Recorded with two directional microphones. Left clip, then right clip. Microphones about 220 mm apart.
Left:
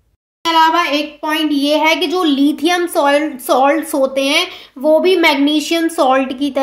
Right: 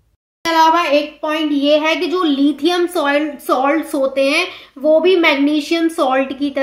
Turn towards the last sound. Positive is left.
turn(degrees=30)  # may be behind; listen again after turning